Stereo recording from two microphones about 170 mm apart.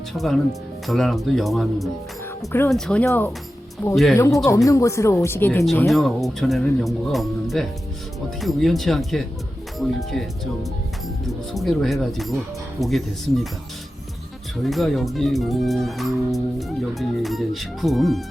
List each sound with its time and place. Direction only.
0.1 s speech: centre (ahead or behind)
3.9 s speech: centre (ahead or behind)
4.4 s speech: 20° left (ahead or behind)
5.9 s speech: centre (ahead or behind)
14.6 s speech: centre (ahead or behind)